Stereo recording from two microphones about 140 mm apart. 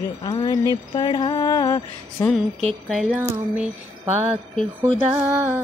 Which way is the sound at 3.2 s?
15° right (ahead or behind).